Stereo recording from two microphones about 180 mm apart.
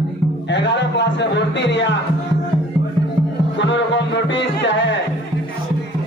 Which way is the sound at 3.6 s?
80° left.